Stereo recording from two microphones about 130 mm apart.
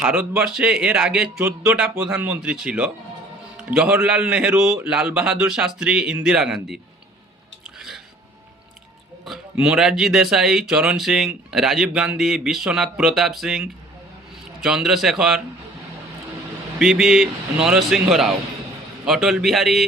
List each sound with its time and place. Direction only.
0.0 s a man's voice: 10° right (ahead or behind)
7.8 s music: centre (ahead or behind)
9.2 s speech: 5° right (ahead or behind)
16.7 s speech: 5° right (ahead or behind)